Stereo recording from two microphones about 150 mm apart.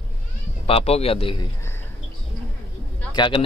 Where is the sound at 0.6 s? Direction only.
40° left (ahead or behind).